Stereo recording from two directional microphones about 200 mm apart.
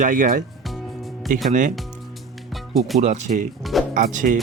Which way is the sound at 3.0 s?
35° right (ahead or behind).